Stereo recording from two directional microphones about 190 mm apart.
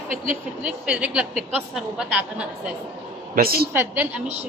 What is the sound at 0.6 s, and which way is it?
A woman's voice, 5° right (ahead or behind).